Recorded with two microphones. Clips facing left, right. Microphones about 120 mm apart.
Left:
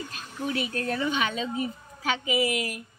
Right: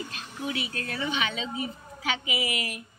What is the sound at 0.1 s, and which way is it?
A woman's voice, 45° left (ahead or behind).